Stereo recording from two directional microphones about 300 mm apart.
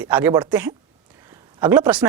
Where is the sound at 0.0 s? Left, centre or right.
Centre.